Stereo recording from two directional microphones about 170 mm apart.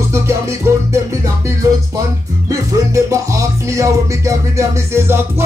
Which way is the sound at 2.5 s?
20° right (ahead or behind).